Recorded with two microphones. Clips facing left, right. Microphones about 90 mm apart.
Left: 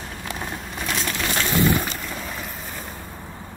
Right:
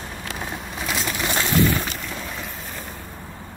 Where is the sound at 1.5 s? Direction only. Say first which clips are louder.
Even; 15° left (ahead or behind).